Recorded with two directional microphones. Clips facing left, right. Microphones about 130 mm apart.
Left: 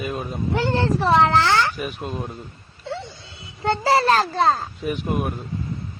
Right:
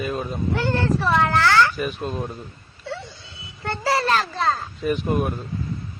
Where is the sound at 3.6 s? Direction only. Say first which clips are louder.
Left 4 dB; 25° left (ahead or behind).